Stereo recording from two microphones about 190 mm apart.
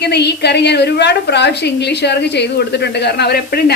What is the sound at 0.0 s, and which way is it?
A woman's voice, 60° left (ahead or behind).